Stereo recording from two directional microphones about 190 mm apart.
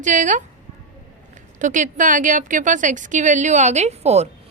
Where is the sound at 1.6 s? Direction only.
40° right (ahead or behind).